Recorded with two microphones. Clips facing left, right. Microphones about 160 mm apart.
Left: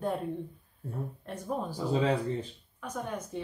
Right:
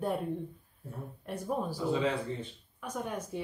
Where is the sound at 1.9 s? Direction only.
35° left (ahead or behind).